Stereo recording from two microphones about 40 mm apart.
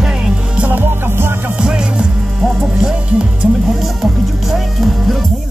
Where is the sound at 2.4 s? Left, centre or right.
Centre.